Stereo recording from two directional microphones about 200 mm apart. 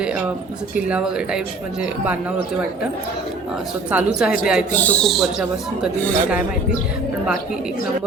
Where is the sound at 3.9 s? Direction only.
5° right (ahead or behind).